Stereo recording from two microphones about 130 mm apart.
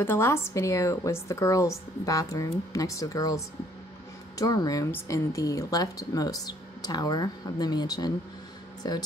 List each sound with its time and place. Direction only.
0.0 s speech: 20° left (ahead or behind)